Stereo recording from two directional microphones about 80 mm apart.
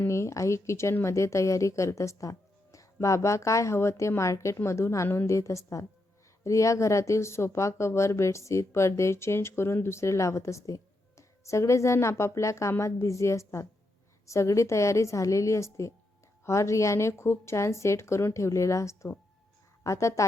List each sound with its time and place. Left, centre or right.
0.1 s speech: left